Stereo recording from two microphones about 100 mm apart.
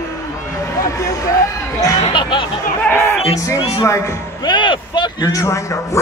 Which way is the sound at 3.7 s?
35° left (ahead or behind).